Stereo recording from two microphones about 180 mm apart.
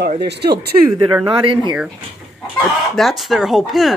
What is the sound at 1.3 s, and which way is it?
Speech, 30° right (ahead or behind).